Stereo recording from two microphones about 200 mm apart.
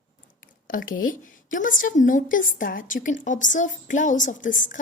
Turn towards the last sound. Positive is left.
turn(degrees=40)  # may be behind; listen again after turning